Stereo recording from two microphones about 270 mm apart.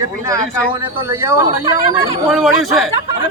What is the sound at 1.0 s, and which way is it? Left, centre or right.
Speech, centre.